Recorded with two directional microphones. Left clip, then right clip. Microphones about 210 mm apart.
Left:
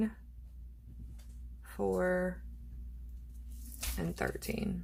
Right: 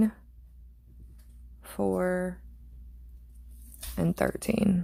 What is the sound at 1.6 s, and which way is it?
Speech, 45° right (ahead or behind).